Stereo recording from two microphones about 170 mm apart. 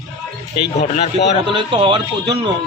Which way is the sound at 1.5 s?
25° right (ahead or behind).